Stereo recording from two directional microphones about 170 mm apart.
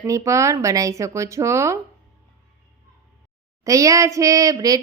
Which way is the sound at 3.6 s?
20° right (ahead or behind).